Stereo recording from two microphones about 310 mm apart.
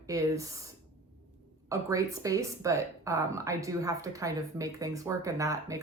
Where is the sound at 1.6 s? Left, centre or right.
Centre.